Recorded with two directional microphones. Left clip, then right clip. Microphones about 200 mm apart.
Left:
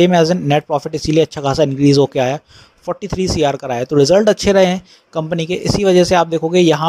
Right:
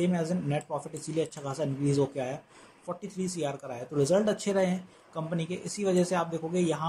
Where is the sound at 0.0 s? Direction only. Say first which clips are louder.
Left 19 dB; 40° left (ahead or behind).